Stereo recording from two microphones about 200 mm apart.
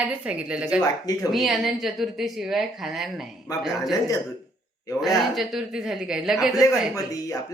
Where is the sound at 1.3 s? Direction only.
Centre (ahead or behind).